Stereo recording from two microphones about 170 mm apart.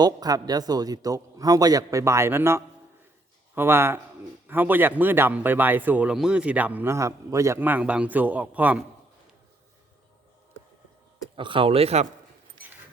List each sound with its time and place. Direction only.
0.0 s a man's voice: 20° right (ahead or behind)
11.3 s speech: 30° right (ahead or behind)